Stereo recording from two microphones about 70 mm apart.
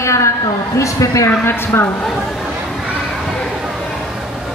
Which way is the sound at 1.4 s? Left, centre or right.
Left.